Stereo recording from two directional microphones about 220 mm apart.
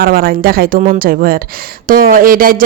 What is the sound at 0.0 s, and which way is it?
Speech, 40° right (ahead or behind).